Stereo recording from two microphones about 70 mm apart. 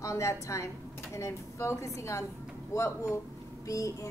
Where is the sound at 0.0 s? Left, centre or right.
Left.